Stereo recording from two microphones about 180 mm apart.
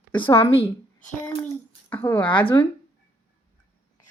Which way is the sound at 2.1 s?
25° left (ahead or behind).